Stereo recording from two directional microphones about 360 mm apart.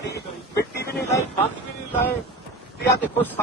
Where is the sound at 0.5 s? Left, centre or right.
Left.